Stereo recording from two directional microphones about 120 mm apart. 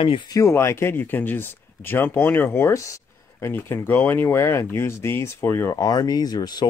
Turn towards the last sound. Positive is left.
turn(degrees=35)  # may be behind; listen again after turning